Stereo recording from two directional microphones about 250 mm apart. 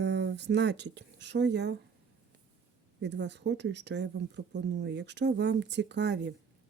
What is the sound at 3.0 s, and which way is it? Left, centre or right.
Speech, right.